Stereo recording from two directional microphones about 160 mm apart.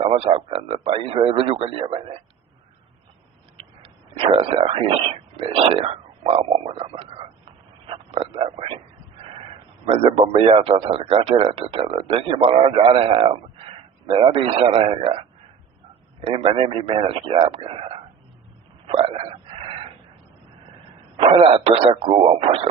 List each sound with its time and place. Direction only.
0.0 s a man's voice: 35° right (ahead or behind)
3.6 s a sound: 35° right (ahead or behind)
9.8 s a man's voice: 35° right (ahead or behind)
16.2 s a man's voice: 35° right (ahead or behind)
21.2 s a man's voice: 35° right (ahead or behind)